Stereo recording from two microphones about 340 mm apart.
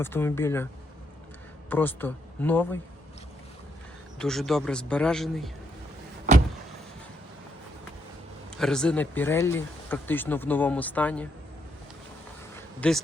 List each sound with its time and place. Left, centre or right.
0.0 s speech: centre
1.7 s speech: centre
4.2 s speech: centre
6.3 s vehicle: right
8.4 s speech: centre
12.5 s a sound: centre